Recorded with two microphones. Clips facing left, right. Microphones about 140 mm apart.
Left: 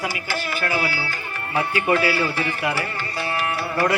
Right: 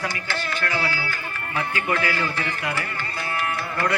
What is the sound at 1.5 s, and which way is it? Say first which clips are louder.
Speech: left 5 dB; 30° left (ahead or behind).